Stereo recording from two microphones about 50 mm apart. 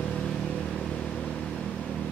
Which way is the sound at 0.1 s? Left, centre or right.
Centre.